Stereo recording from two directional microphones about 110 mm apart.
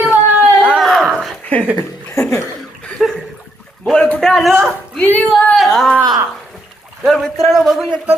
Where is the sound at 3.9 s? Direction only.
10° left (ahead or behind).